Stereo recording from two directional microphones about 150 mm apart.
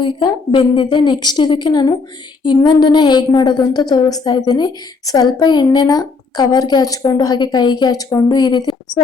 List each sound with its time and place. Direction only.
0.0 s a woman's voice: 35° left (ahead or behind)